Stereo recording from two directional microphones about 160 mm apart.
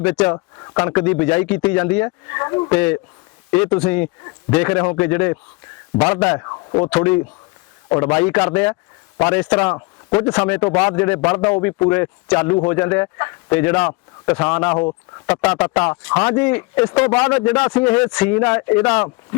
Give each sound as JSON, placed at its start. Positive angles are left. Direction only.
{"t": 0.0, "sound": "speech", "side_deg": 10}
{"t": 0.3, "sound": "speech", "side_deg": 25}
{"t": 2.0, "sound": "speech", "side_deg": 20}
{"t": 2.7, "sound": "speech", "side_deg": 10}
{"t": 6.4, "sound": "a man's voice", "side_deg": 25}
{"t": 6.9, "sound": "speech", "side_deg": 10}